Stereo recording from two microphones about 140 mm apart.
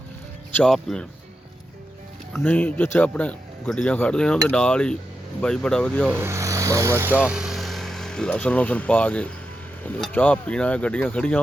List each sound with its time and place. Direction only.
0.5 s speech: 5° left (ahead or behind)
2.3 s speech: 15° left (ahead or behind)
6.1 s speech: 15° right (ahead or behind); by 11.3 s 10° left (ahead or behind)